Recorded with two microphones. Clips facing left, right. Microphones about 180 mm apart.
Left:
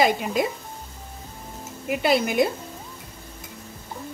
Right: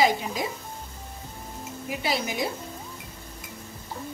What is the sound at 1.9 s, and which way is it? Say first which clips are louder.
Speech: left 7 dB; 60° left (ahead or behind).